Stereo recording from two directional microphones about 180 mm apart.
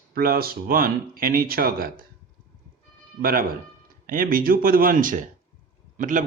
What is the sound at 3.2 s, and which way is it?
A man's voice, 55° right (ahead or behind).